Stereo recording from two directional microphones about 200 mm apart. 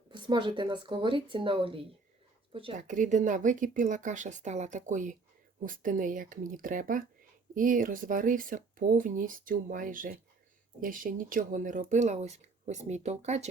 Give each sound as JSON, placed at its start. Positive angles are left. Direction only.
{"t": 0.1, "sound": "speech", "side_deg": -25}
{"t": 2.8, "sound": "speech", "side_deg": -40}